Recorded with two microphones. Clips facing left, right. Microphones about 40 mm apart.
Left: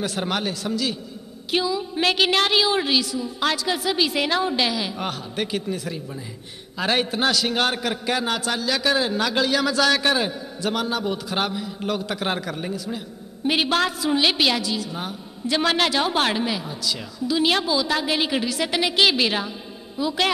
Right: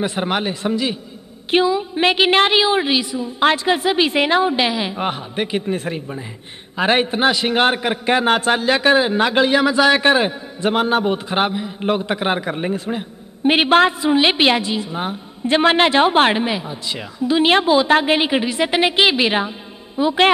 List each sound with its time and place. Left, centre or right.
0.0 s a woman's voice: right
5.8 s a man's voice: right